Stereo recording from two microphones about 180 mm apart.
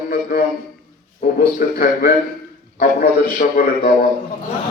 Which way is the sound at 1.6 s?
55° left (ahead or behind).